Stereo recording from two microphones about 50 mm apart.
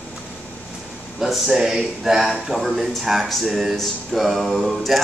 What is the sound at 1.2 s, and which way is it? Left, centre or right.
Speech, centre.